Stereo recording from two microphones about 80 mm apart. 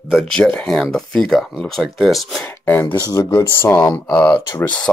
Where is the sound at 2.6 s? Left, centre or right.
Left.